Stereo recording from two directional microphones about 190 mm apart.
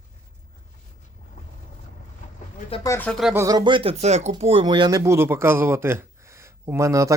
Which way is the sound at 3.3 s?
15° right (ahead or behind).